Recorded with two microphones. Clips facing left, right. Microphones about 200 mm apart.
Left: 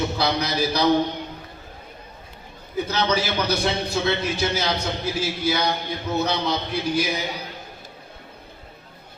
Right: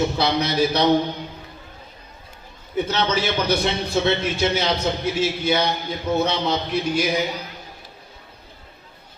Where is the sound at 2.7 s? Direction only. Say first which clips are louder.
Right 1 dB; 25° right (ahead or behind).